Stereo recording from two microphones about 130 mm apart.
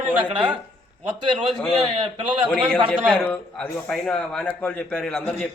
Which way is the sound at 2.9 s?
10° left (ahead or behind).